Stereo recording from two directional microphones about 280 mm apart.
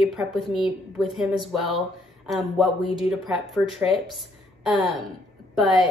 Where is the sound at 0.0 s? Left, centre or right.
Centre.